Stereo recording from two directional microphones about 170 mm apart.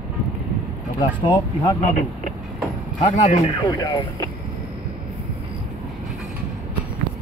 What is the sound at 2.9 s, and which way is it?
Speech, 40° left (ahead or behind).